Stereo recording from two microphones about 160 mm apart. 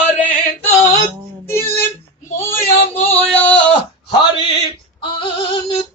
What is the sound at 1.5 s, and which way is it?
Music, 15° left (ahead or behind).